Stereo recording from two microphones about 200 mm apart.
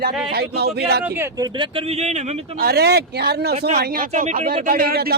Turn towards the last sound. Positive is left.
turn(degrees=-45)  # may be behind; listen again after turning